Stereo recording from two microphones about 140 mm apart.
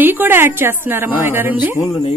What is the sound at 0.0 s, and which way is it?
Speech, 15° right (ahead or behind).